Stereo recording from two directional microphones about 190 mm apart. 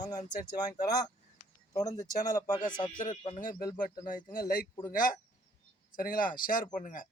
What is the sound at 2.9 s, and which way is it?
Speech, 45° left (ahead or behind).